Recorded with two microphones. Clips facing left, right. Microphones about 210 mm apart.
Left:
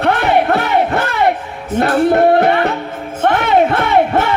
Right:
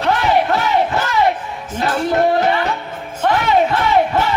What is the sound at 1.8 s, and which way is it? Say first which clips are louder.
Music: left 5 dB; 60° left (ahead or behind).